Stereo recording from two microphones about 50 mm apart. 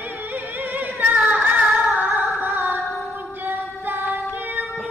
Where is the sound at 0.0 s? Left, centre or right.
Right.